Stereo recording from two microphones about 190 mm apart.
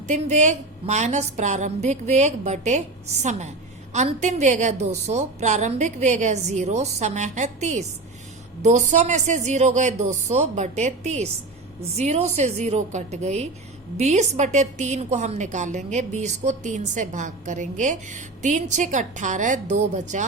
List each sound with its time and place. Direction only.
0.1 s a woman's voice: 40° right (ahead or behind)
3.9 s a woman's voice: 40° right (ahead or behind)